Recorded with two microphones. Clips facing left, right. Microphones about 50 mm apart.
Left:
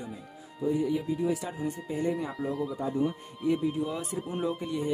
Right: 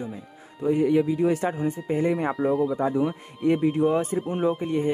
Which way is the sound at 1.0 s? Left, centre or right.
Right.